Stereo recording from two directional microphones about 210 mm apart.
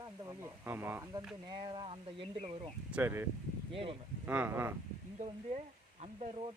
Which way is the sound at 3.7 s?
25° right (ahead or behind).